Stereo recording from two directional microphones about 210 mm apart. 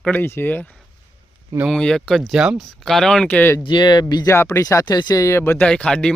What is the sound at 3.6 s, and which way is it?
Speech, 20° left (ahead or behind).